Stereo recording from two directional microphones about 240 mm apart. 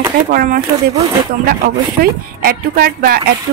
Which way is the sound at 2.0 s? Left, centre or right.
Right.